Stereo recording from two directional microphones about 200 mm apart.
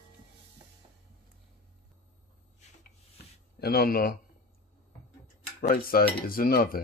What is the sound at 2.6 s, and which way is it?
Rub, 35° left (ahead or behind).